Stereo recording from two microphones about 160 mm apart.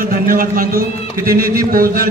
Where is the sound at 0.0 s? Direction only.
60° right (ahead or behind).